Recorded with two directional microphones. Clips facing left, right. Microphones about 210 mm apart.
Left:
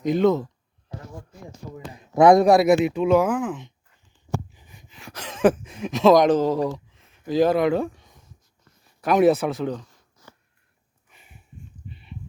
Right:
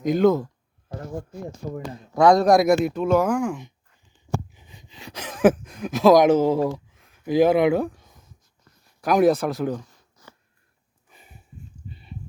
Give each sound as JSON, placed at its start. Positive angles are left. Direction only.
{"t": 0.0, "sound": "speech", "side_deg": 0}
{"t": 2.1, "sound": "speech", "side_deg": 20}
{"t": 2.5, "sound": "speech", "side_deg": 5}
{"t": 4.5, "sound": "a sound", "side_deg": -20}
{"t": 5.3, "sound": "speech", "side_deg": -5}
{"t": 6.7, "sound": "a sound", "side_deg": -5}
{"t": 7.3, "sound": "speech", "side_deg": -10}
{"t": 11.1, "sound": "sniff", "side_deg": -40}
{"t": 11.9, "sound": "livestock", "side_deg": -40}